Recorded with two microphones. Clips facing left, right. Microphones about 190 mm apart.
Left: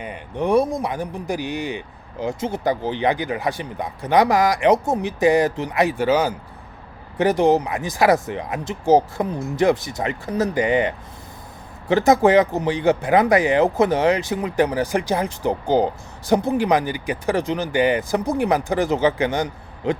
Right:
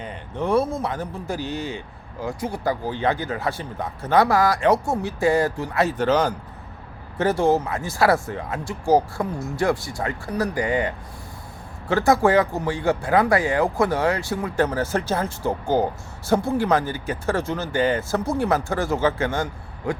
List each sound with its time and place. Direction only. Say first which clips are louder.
0.0 s speech: left 3 dB; 15° left (ahead or behind)